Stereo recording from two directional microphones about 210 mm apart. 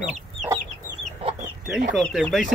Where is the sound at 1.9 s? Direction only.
Centre (ahead or behind).